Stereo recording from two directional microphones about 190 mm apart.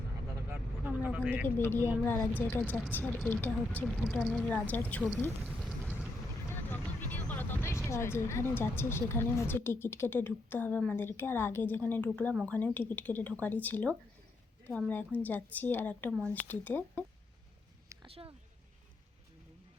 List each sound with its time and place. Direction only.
0.5 s vehicle: 5° right (ahead or behind)
1.5 s a woman's voice: 10° left (ahead or behind)
6.7 s vehicle: 10° left (ahead or behind)
7.9 s a woman's voice: 15° left (ahead or behind)
18.1 s speech: 30° right (ahead or behind)